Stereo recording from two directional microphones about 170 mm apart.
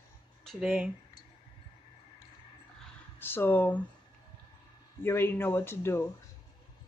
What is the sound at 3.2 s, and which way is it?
Speech, 10° left (ahead or behind).